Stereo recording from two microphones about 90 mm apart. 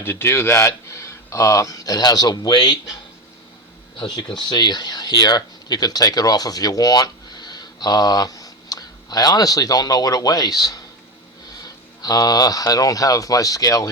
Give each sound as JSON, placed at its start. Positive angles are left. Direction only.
{"t": 0.0, "sound": "speech", "side_deg": 25}
{"t": 3.9, "sound": "speech", "side_deg": 55}
{"t": 12.0, "sound": "speech", "side_deg": 45}